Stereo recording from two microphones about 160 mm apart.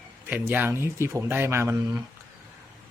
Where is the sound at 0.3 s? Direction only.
10° right (ahead or behind).